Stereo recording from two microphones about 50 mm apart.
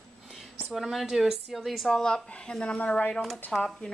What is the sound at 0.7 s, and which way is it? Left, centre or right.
A woman's voice, centre.